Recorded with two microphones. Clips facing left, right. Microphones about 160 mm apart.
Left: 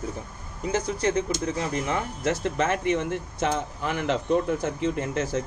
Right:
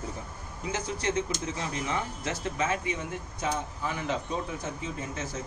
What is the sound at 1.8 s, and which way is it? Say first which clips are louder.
Speech: left 5 dB; 55° left (ahead or behind).